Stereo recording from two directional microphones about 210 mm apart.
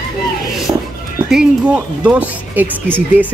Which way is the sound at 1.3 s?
5° right (ahead or behind).